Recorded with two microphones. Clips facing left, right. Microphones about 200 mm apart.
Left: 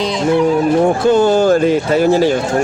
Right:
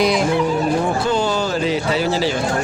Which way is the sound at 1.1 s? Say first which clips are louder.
Left 9 dB; 50° left (ahead or behind).